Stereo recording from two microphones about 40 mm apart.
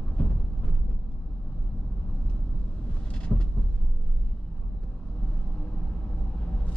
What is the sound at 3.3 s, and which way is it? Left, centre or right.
Vehicle, centre.